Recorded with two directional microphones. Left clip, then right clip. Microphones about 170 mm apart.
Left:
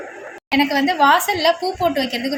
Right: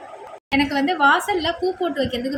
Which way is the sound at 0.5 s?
30° left (ahead or behind).